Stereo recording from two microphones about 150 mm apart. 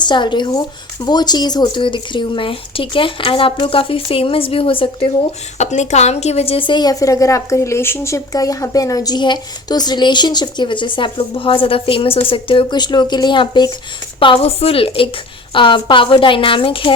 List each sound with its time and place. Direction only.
0.0 s speech: 30° left (ahead or behind)
5.5 s a woman's voice: 50° left (ahead or behind); by 16.9 s 35° left (ahead or behind)